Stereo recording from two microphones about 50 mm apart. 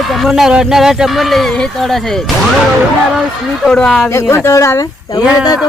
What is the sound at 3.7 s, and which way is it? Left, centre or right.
Speech, centre.